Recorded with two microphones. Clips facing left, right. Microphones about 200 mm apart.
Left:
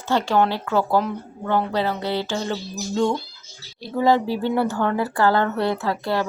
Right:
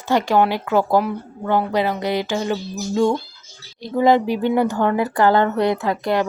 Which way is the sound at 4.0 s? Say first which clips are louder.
Right 3 dB; 15° right (ahead or behind).